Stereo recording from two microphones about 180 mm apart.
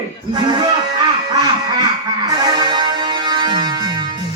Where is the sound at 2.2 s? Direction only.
25° right (ahead or behind).